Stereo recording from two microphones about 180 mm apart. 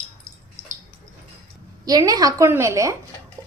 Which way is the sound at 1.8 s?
20° right (ahead or behind).